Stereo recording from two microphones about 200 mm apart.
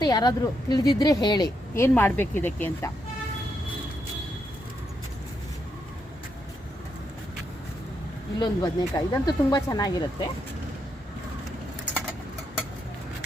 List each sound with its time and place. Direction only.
0.0 s speech: 20° left (ahead or behind)
8.4 s speech: 20° left (ahead or behind)